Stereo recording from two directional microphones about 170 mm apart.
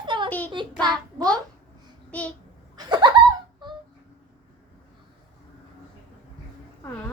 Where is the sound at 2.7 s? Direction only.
25° right (ahead or behind).